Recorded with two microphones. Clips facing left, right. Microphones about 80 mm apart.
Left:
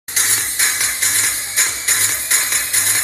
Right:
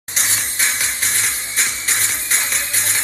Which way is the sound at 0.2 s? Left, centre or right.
Left.